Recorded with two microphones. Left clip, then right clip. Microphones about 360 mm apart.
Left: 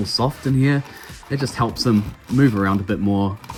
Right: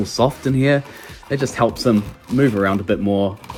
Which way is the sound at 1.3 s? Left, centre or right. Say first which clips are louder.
Right 4 dB; centre.